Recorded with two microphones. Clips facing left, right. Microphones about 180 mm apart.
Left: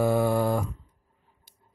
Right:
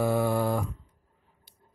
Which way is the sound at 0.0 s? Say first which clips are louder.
Left 2 dB; 45° left (ahead or behind).